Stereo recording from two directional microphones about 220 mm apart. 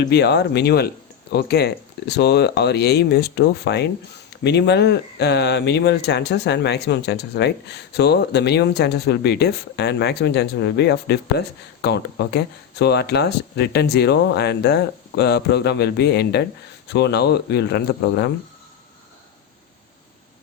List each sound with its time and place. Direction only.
0.0 s speech: 50° left (ahead or behind)